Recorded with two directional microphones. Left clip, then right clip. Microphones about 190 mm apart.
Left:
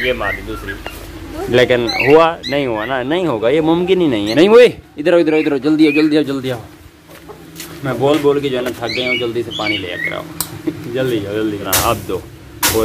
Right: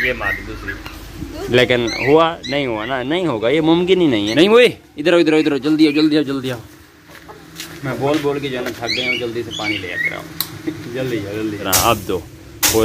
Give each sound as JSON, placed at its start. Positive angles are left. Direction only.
{"t": 0.0, "sound": "speech", "side_deg": 10}
{"t": 1.5, "sound": "speech", "side_deg": -10}
{"t": 4.4, "sound": "speech", "side_deg": 0}
{"t": 7.5, "sound": "speech", "side_deg": 10}
{"t": 11.6, "sound": "speech", "side_deg": -15}